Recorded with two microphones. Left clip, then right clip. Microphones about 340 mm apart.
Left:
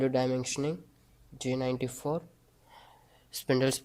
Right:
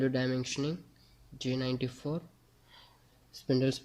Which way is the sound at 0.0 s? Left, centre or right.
Centre.